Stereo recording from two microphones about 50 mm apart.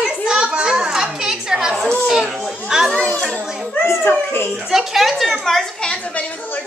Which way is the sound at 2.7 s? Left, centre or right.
Centre.